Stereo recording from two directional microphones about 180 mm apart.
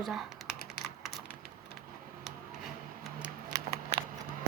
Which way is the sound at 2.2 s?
Centre (ahead or behind).